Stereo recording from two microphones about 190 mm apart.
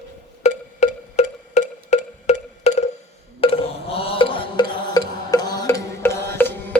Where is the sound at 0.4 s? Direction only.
35° left (ahead or behind).